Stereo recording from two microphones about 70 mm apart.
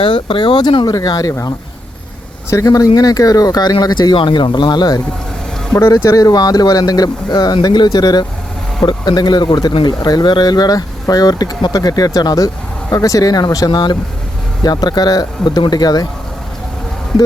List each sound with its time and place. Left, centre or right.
0.5 s speech: left
1.0 s speech: left
2.5 s speech: left
5.9 s speech: left
14.6 s speech: left